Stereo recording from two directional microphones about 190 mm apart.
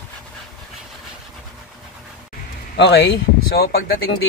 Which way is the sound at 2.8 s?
65° left (ahead or behind).